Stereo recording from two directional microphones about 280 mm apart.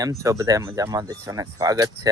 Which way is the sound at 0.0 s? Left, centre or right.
Centre.